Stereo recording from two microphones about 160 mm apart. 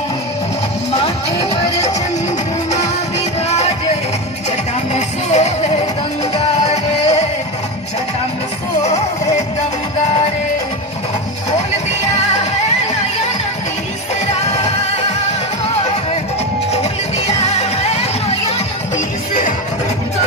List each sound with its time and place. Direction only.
1.0 s music: 40° left (ahead or behind)
3.4 s music: 40° left (ahead or behind)
4.9 s music: 45° left (ahead or behind)
14.2 s music: 45° left (ahead or behind)
17.3 s music: 45° left (ahead or behind)